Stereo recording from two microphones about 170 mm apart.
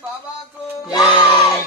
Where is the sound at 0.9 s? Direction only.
25° left (ahead or behind).